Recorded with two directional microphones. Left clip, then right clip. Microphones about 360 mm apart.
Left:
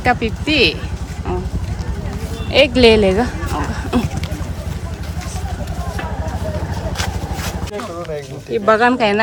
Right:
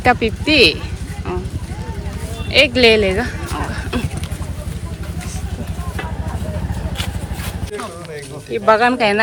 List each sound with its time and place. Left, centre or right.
0.0 s speech: centre
2.5 s speech: centre
7.4 s speech: left
8.6 s speech: centre